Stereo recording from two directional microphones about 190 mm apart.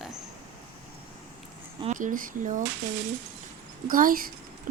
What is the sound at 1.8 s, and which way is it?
Speech, 40° right (ahead or behind).